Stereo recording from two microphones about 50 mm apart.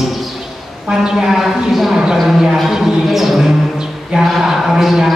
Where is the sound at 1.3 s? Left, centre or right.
Centre.